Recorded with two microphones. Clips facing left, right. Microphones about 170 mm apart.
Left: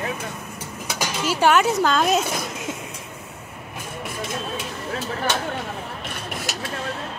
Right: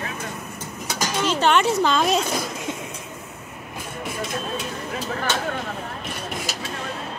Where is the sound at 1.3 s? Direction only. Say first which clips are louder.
Left 2 dB; 5° left (ahead or behind).